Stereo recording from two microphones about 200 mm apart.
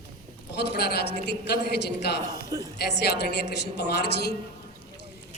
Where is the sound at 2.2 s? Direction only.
20° right (ahead or behind).